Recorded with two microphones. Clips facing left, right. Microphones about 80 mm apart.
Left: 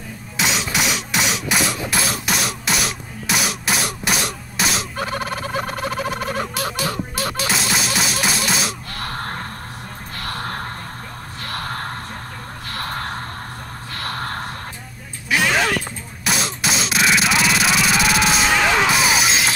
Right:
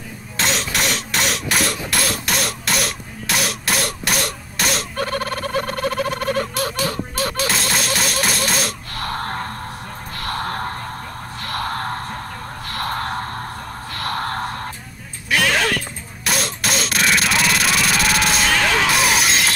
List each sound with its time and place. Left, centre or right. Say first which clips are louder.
0.4 s a sound: even; centre
4.9 s fowl: right 2 dB; centre
8.0 s music: even; centre
10.1 s music: right 3 dB; right
11.4 s gasp: right 3 dB; right
12.6 s a sound: right 3 dB; right
13.9 s music: right 3 dB; right
15.2 s a sound: even; centre
18.5 s music: left 1 dB; centre
18.9 s music: even; centre